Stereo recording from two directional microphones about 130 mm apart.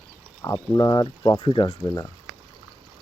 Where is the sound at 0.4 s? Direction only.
25° left (ahead or behind).